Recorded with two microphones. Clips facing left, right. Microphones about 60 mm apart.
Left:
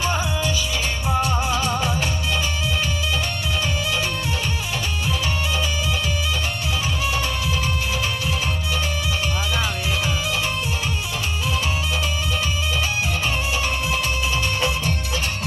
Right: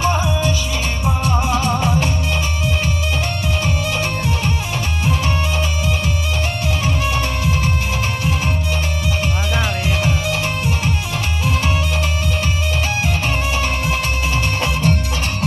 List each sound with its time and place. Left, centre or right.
0.0 s music: right
6.9 s music: right
9.6 s music: right
13.6 s music: right